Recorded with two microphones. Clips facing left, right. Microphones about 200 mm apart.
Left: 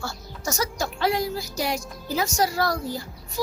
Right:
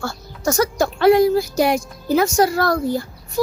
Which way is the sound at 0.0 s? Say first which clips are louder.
Right 9 dB; 55° right (ahead or behind).